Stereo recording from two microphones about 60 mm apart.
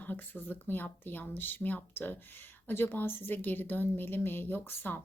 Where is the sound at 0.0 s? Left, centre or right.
Left.